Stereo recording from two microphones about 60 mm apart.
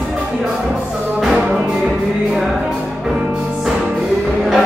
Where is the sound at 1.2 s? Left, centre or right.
Centre.